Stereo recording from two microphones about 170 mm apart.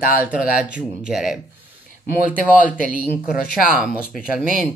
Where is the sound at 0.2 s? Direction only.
10° right (ahead or behind).